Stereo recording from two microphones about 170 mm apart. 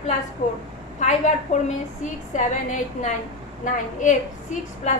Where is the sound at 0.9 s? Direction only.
45° left (ahead or behind).